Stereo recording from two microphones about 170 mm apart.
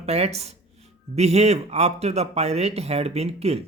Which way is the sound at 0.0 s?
40° right (ahead or behind).